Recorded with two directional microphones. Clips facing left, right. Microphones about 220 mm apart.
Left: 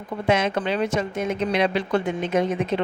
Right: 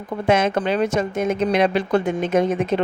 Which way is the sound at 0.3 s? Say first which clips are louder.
Right 3 dB; 45° right (ahead or behind).